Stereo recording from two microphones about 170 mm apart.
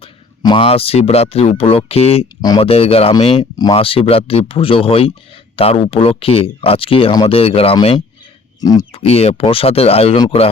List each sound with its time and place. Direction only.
0.0 s speech: 30° left (ahead or behind)
8.6 s speech: 20° left (ahead or behind)